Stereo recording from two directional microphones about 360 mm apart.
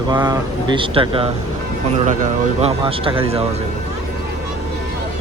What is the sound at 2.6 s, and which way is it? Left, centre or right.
Speech, centre.